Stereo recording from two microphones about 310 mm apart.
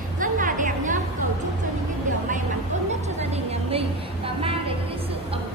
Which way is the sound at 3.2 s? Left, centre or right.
Centre.